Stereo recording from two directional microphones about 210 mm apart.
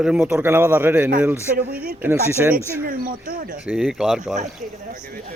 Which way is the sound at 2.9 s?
45° right (ahead or behind).